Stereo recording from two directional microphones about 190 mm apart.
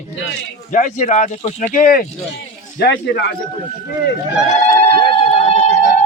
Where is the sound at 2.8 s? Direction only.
55° left (ahead or behind).